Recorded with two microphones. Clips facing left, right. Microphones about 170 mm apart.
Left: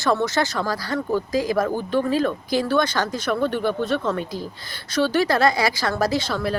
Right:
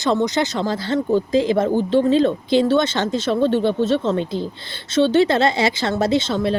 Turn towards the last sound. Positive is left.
turn(degrees=-25)  # may be behind; listen again after turning